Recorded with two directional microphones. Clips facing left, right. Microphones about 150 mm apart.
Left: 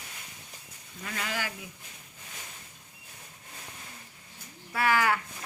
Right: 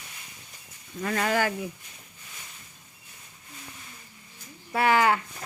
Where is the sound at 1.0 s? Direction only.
50° right (ahead or behind).